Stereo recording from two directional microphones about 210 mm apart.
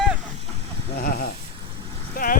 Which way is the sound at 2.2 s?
35° left (ahead or behind).